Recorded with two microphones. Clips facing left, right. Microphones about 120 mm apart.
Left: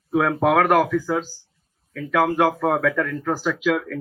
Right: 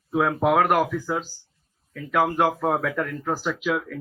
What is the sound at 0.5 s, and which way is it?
Speech, 20° right (ahead or behind).